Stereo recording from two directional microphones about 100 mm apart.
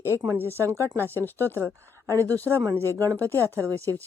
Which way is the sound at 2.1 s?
30° right (ahead or behind).